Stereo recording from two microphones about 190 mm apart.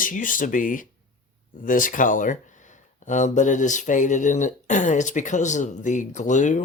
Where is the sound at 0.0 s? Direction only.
45° left (ahead or behind).